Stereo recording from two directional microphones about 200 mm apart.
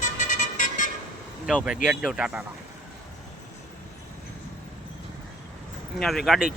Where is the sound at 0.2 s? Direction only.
40° left (ahead or behind).